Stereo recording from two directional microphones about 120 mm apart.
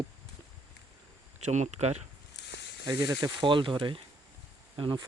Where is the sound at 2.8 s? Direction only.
30° right (ahead or behind).